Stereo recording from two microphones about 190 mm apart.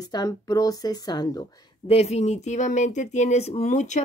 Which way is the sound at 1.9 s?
35° left (ahead or behind).